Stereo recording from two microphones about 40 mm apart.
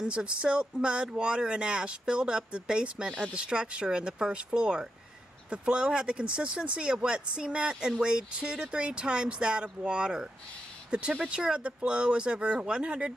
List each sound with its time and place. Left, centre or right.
0.0 s speech: right
10.9 s speech: right